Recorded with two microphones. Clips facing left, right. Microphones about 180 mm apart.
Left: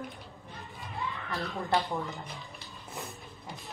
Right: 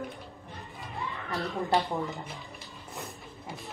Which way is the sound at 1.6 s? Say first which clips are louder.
Right 2 dB; 20° right (ahead or behind).